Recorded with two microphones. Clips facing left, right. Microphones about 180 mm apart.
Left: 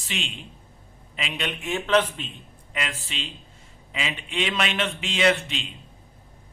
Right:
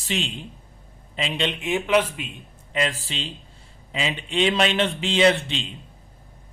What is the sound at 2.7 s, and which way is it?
A man's voice, 30° right (ahead or behind).